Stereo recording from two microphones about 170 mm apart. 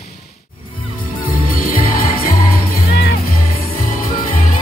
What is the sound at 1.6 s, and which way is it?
Music, 55° left (ahead or behind).